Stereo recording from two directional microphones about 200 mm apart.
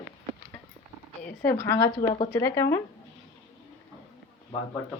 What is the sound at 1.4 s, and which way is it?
Speech, 10° left (ahead or behind).